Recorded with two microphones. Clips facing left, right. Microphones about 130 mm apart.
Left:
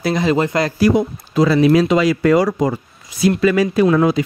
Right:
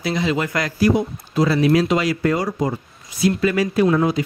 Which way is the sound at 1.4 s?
90° left.